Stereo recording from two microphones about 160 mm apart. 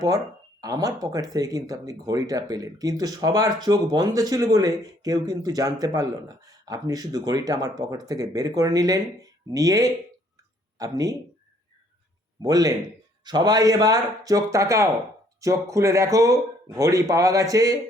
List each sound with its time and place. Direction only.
0.6 s speech: 25° right (ahead or behind)
12.4 s speech: 25° right (ahead or behind)